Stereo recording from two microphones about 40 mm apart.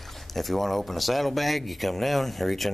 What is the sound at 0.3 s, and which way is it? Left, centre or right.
Speech, centre.